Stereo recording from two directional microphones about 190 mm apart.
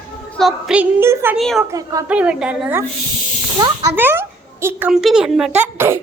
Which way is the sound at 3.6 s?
20° right (ahead or behind).